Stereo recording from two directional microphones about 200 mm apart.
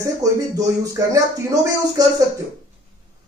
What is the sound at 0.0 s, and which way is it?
Speech, 15° right (ahead or behind).